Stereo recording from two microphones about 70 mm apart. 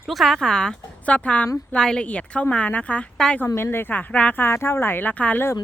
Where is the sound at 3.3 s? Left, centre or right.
Left.